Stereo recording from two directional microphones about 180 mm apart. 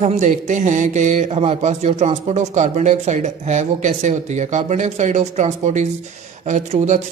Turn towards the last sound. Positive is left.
turn(degrees=-40)  # may be behind; listen again after turning